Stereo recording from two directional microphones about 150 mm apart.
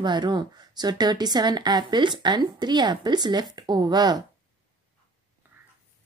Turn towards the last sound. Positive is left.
turn(degrees=-25)  # may be behind; listen again after turning